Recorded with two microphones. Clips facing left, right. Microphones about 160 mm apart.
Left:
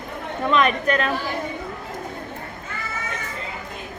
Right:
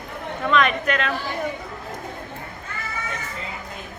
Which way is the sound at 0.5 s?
35° left (ahead or behind).